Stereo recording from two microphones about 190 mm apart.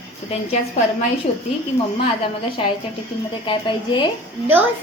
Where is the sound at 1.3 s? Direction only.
30° left (ahead or behind).